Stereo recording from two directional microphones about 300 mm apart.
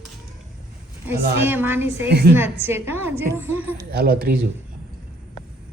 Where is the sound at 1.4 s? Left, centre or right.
Centre.